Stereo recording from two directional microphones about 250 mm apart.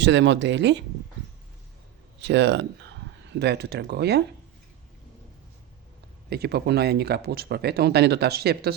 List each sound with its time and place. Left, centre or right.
0.0 s speech: right
2.2 s speech: right
6.3 s speech: right